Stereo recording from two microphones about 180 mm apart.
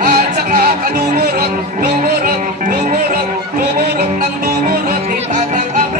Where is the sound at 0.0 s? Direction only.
60° right (ahead or behind).